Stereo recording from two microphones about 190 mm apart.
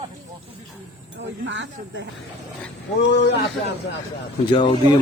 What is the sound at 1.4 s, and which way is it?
Speech, 75° right (ahead or behind).